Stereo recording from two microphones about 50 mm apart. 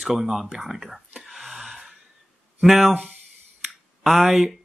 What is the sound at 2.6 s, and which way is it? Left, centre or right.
Speech, centre.